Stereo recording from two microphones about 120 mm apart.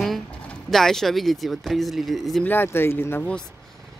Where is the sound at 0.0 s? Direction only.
Centre (ahead or behind).